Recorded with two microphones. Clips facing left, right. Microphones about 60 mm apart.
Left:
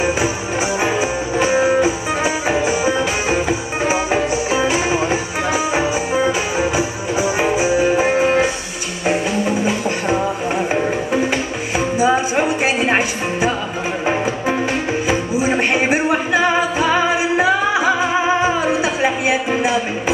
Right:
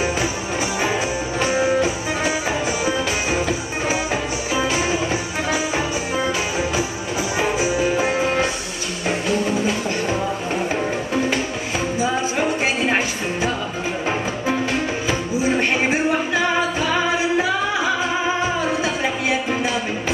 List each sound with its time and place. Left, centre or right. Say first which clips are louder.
1.4 s music: left 4 dB; centre
9.7 s music: left 3 dB; centre
14.0 s music: left 5 dB; centre